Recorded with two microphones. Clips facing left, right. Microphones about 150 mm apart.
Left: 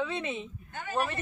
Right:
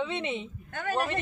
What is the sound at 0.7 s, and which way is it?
Speech, 75° right (ahead or behind).